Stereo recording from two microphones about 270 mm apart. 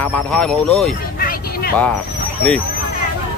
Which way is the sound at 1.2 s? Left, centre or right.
Left.